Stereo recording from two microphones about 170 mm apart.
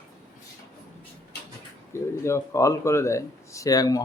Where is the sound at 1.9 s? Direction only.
15° left (ahead or behind).